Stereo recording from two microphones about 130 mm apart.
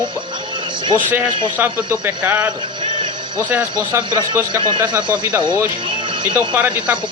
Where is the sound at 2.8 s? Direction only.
35° right (ahead or behind).